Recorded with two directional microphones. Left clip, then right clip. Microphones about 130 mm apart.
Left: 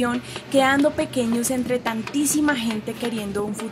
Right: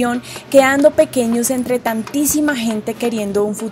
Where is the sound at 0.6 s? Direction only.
45° right (ahead or behind).